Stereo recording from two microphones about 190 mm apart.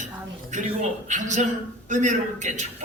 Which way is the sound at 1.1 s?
40° right (ahead or behind).